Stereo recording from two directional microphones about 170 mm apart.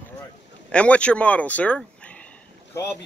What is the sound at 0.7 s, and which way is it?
A man's voice, 5° left (ahead or behind).